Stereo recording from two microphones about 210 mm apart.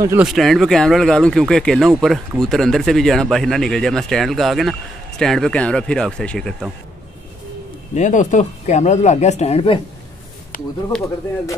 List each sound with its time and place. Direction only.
0.0 s speech: 15° right (ahead or behind)
0.3 s speech: centre (ahead or behind)
7.9 s speech: 35° left (ahead or behind)
10.5 s a sound: 40° left (ahead or behind)